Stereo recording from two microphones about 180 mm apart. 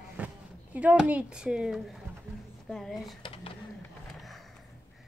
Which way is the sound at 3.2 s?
30° left (ahead or behind).